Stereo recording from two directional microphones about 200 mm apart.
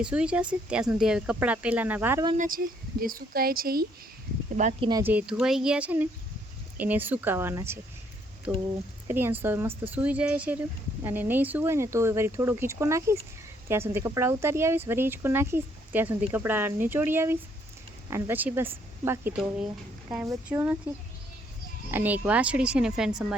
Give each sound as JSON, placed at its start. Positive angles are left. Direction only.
{"t": 0.0, "sound": "speech", "side_deg": -5}
{"t": 2.3, "sound": "speech", "side_deg": -40}
{"t": 4.5, "sound": "speech", "side_deg": -35}
{"t": 4.9, "sound": "speech", "side_deg": -20}
{"t": 5.1, "sound": "speech", "side_deg": -5}
{"t": 9.0, "sound": "speech", "side_deg": -10}
{"t": 21.9, "sound": "speech", "side_deg": -10}